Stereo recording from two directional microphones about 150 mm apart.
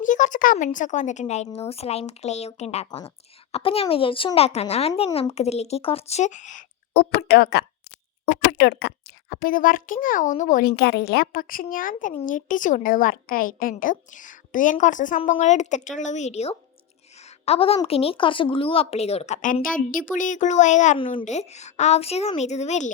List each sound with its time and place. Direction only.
0.0 s a woman's voice: 60° left (ahead or behind)
17.2 s a sound: 45° left (ahead or behind)
17.8 s speech: 40° left (ahead or behind)
19.7 s a woman's voice: 65° left (ahead or behind)